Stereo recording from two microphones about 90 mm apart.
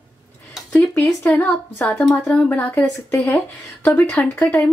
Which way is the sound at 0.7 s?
20° left (ahead or behind).